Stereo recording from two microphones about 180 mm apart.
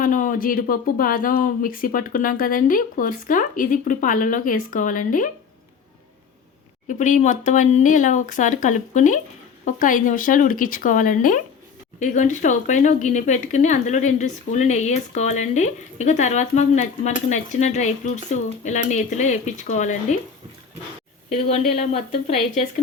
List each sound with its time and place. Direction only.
0.0 s speech: 50° left (ahead or behind)
6.8 s speech: 45° left (ahead or behind)
21.3 s speech: 35° left (ahead or behind)